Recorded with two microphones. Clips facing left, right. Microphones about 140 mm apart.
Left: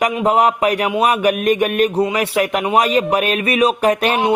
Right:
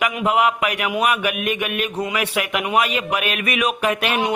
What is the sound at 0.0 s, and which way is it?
Speech, 35° left (ahead or behind).